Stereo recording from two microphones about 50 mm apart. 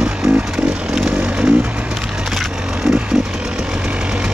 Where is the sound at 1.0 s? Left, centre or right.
Right.